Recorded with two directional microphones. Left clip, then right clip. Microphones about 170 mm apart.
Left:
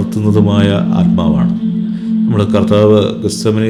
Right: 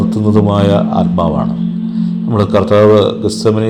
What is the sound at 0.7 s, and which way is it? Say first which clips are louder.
Speech: right 3 dB; 45° left (ahead or behind).